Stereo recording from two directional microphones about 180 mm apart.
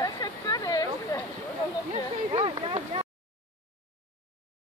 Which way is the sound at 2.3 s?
30° right (ahead or behind).